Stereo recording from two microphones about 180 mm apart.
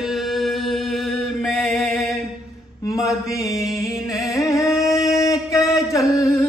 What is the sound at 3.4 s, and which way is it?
Music, 15° left (ahead or behind).